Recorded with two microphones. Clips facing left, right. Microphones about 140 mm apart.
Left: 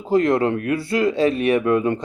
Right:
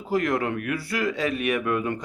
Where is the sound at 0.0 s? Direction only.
25° left (ahead or behind).